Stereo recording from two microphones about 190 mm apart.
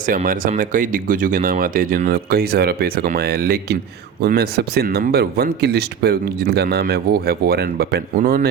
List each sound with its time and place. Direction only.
0.0 s speech: 45° right (ahead or behind)